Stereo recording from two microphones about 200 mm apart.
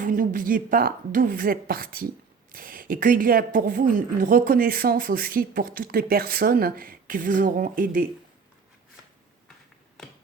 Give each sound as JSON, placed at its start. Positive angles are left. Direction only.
{"t": 0.0, "sound": "a woman's voice", "side_deg": -40}